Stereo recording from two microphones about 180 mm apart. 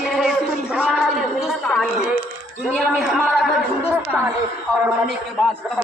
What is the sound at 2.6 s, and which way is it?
Speech, 5° right (ahead or behind).